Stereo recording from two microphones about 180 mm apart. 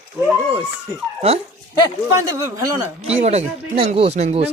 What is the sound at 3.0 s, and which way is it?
Speech, 35° right (ahead or behind).